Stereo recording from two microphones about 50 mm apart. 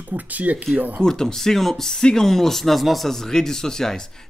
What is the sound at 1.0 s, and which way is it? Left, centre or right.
Speech, centre.